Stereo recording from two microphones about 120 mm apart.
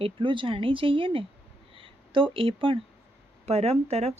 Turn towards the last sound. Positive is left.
turn(degrees=-60)  # may be behind; listen again after turning